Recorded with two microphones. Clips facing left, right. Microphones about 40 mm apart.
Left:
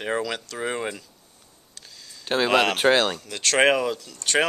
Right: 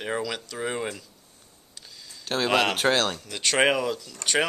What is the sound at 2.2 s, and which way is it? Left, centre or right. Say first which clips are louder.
Speech: left 3 dB; left.